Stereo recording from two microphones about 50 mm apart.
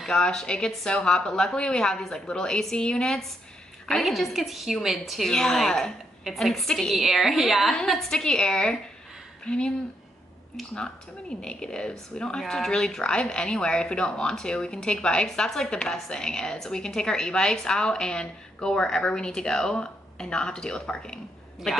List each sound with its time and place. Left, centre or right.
0.1 s a woman's voice: centre
3.8 s a woman's voice: centre
5.3 s a woman's voice: centre
7.0 s a woman's voice: centre
7.7 s a woman's voice: centre